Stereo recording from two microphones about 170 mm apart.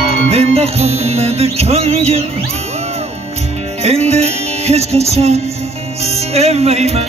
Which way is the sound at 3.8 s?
40° right (ahead or behind).